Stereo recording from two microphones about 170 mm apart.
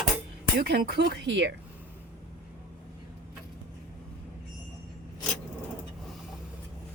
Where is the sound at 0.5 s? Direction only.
65° right (ahead or behind); by 1.5 s 90° right.